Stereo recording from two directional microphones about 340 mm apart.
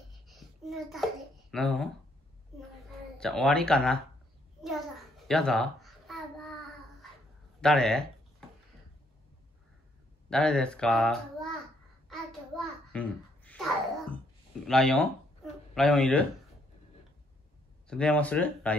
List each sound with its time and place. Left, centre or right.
0.3 s a sound: centre
1.5 s speech: centre
3.2 s speech: centre
5.3 s babbling: centre
7.6 s speech: centre
10.3 s speech: centre
12.1 s a sound: centre
14.7 s speech: centre
17.8 s speech: centre